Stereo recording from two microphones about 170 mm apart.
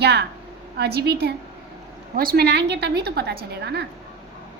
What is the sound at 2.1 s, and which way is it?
A woman's voice, 65° right (ahead or behind).